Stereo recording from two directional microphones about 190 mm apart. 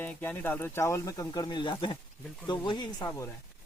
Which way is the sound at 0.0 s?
10° left (ahead or behind).